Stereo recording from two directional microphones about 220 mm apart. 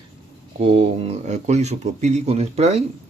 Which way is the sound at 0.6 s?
25° right (ahead or behind).